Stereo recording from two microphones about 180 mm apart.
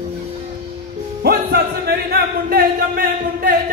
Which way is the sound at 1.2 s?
65° right (ahead or behind).